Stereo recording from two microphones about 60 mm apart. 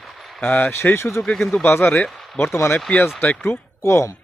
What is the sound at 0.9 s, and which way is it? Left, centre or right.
Speech, left.